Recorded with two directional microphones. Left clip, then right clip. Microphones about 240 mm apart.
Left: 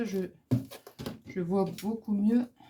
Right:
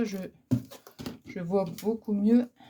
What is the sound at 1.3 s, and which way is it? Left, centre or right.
Speech, right.